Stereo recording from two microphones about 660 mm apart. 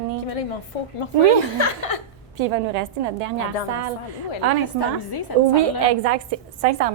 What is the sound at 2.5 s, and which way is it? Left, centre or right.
A woman's voice, right.